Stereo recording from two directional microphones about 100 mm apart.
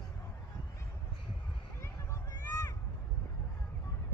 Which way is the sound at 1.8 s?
30° left (ahead or behind).